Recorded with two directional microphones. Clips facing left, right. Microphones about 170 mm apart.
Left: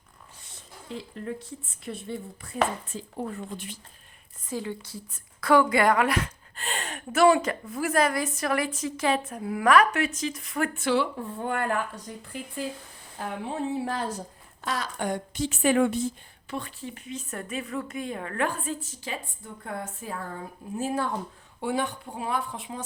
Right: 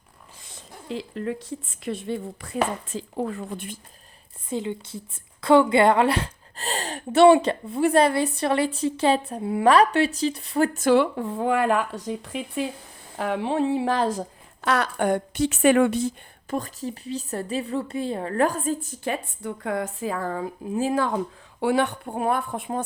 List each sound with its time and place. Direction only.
0.4 s speech: 90° right
4.4 s a woman's voice: 20° right (ahead or behind); by 11.1 s 50° right (ahead or behind)
11.2 s a woman's voice: 90° right
16.5 s speech: 40° right (ahead or behind); by 21.2 s 90° right
21.6 s speech: 75° right (ahead or behind); by 22.8 s 55° right (ahead or behind)